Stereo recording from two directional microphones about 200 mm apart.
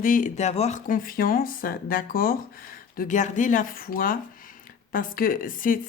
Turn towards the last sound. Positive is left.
turn(degrees=45)  # may be behind; listen again after turning